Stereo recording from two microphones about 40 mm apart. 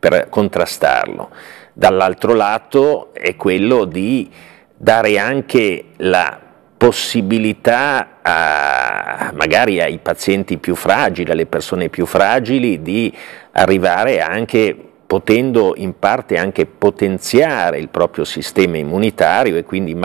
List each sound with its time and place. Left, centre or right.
0.0 s speech: centre
9.1 s speech: centre
9.4 s speech: centre